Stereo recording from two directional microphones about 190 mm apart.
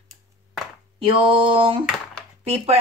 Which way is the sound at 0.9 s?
30° right (ahead or behind).